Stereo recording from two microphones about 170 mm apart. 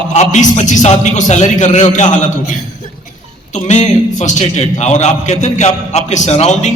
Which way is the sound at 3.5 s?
45° left (ahead or behind).